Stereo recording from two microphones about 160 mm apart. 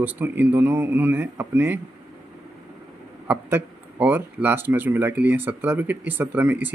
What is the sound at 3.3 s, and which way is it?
Speech, 10° right (ahead or behind).